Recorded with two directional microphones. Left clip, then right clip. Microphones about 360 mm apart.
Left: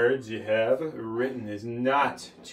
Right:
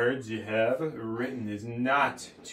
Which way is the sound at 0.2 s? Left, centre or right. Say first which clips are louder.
Left 2 dB; centre.